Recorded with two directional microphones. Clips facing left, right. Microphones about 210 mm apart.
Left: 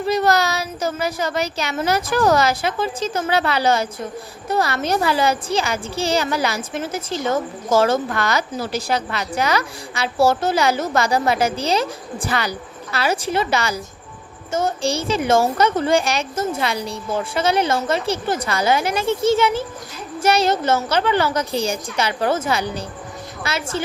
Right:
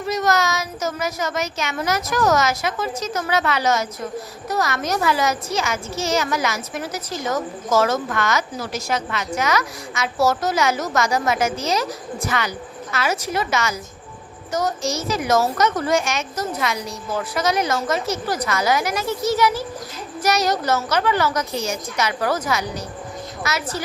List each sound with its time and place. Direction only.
0.0 s a woman's voice: 30° left (ahead or behind)